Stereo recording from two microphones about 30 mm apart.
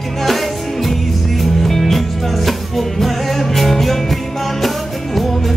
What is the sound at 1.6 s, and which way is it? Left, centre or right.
Music, centre.